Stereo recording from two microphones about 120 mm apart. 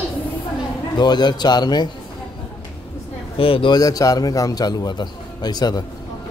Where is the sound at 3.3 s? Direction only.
50° left (ahead or behind).